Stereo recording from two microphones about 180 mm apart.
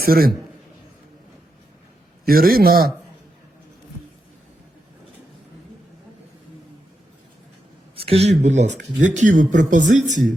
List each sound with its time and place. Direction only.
0.0 s a man's voice: 55° right (ahead or behind)
2.2 s a man's voice: 55° right (ahead or behind)
7.9 s speech: 35° right (ahead or behind)